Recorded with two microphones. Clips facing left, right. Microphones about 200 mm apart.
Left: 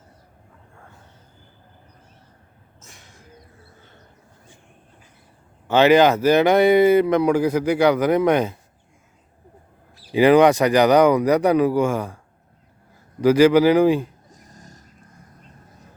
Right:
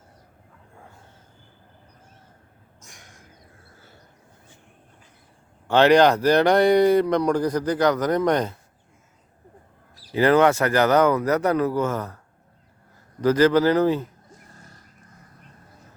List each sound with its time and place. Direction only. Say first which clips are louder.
5.6 s speech: left 1 dB; 5° left (ahead or behind)
10.1 s speech: left 4 dB; 15° left (ahead or behind)
13.2 s speech: left 4 dB; 10° left (ahead or behind)
14.3 s a sound: left 2 dB; 40° left (ahead or behind)